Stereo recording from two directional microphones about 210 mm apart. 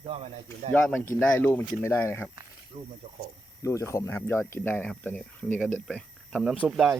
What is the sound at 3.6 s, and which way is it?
Speech, 15° left (ahead or behind).